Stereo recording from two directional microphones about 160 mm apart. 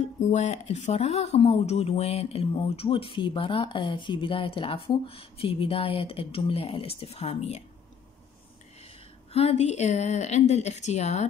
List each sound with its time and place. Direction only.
0.2 s speech: 45° left (ahead or behind)
9.3 s speech: 40° left (ahead or behind)